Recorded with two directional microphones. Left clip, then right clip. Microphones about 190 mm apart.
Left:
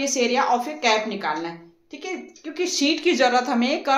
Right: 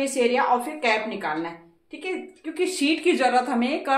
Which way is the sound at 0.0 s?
25° left (ahead or behind).